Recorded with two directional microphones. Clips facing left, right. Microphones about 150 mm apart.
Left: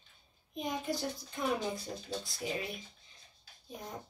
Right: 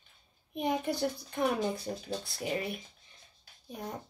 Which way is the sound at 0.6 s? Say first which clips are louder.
Right 5 dB; 65° right (ahead or behind).